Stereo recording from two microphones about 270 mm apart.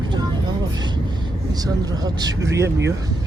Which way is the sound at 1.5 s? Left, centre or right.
Centre.